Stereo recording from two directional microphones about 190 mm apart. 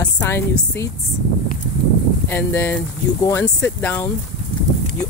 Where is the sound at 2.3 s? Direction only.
10° left (ahead or behind).